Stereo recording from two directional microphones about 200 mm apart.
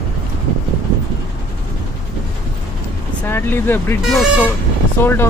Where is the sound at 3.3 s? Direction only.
10° left (ahead or behind).